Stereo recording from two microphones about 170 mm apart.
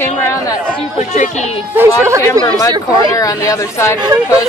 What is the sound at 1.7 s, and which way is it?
Speech, 15° right (ahead or behind).